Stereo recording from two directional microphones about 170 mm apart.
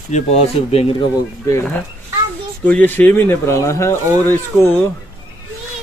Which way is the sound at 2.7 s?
10° left (ahead or behind).